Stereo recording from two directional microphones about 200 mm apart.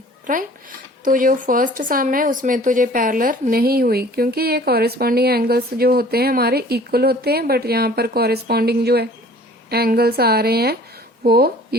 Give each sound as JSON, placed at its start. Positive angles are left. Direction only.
{"t": 0.3, "sound": "a woman's voice", "side_deg": -45}